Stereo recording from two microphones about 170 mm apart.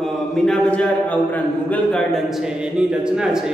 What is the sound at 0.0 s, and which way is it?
A man's voice, 5° left (ahead or behind).